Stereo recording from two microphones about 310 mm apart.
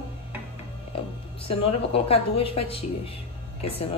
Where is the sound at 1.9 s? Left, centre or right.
Centre.